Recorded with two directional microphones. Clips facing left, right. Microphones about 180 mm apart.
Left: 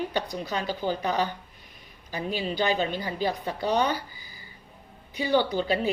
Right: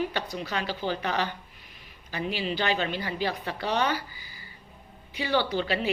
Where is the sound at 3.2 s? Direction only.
15° left (ahead or behind).